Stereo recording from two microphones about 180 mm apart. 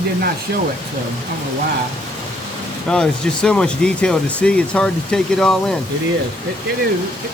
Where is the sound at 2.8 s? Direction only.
5° left (ahead or behind).